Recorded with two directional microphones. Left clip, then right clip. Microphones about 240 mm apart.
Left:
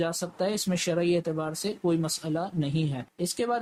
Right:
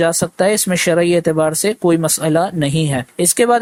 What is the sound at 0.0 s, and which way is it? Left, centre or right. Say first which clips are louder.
Speech: right 14 dB; right.